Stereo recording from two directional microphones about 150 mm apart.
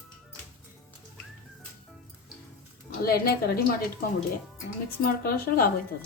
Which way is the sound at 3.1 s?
90° left.